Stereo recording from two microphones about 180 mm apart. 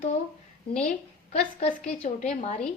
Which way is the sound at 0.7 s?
5° left (ahead or behind).